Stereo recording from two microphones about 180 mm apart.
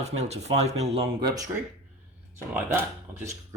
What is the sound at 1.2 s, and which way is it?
Speech, 20° right (ahead or behind).